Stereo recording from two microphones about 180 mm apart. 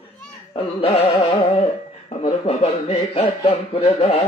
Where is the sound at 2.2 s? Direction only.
35° left (ahead or behind).